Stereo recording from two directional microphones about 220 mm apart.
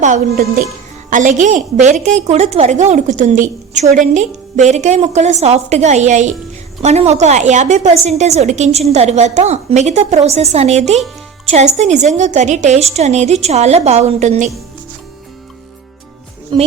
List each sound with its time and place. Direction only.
0.0 s a woman's voice: 35° right (ahead or behind)